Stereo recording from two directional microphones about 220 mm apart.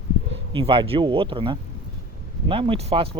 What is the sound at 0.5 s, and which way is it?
Speech, 25° right (ahead or behind).